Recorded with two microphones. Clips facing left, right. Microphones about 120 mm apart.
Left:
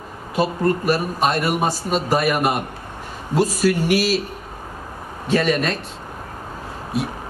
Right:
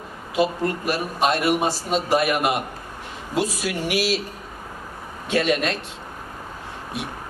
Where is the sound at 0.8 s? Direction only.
45° left (ahead or behind).